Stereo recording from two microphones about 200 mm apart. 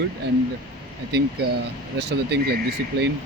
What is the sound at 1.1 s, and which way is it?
Speech, 55° right (ahead or behind).